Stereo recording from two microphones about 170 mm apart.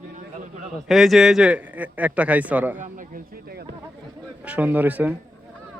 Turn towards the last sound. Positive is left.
turn(degrees=-10)  # may be behind; listen again after turning